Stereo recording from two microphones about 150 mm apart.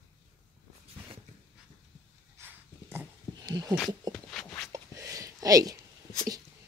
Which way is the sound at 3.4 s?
25° right (ahead or behind).